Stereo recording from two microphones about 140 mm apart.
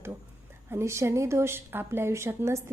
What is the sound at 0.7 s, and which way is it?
A woman's voice, 20° right (ahead or behind).